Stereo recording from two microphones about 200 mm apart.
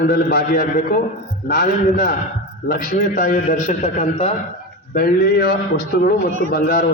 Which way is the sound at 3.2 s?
40° left (ahead or behind).